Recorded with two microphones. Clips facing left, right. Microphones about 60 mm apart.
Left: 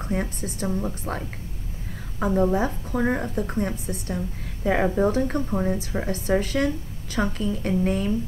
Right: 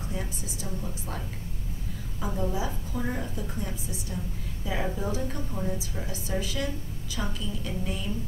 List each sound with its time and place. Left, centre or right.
0.1 s a woman's voice: left